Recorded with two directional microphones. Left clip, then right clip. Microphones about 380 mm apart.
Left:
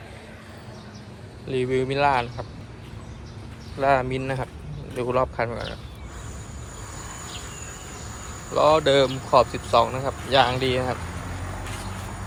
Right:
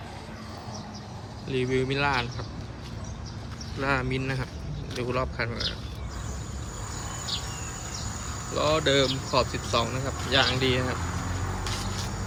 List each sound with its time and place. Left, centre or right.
1.5 s speech: centre
3.8 s speech: centre
8.5 s speech: centre